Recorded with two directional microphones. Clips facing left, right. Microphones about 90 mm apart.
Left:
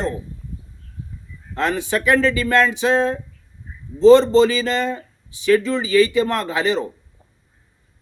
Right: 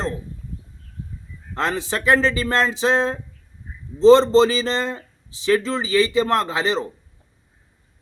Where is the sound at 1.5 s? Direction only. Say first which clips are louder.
Left 3 dB; 30° right (ahead or behind).